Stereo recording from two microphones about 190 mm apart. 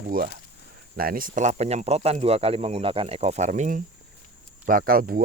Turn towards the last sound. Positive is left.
turn(degrees=-50)  # may be behind; listen again after turning